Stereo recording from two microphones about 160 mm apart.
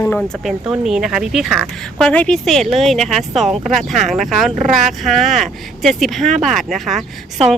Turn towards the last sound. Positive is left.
turn(degrees=0)  # may be behind; listen again after turning